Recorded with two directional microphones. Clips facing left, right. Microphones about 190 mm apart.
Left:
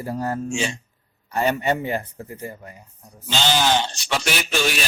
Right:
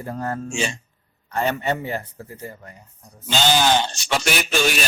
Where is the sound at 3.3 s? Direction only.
45° right (ahead or behind).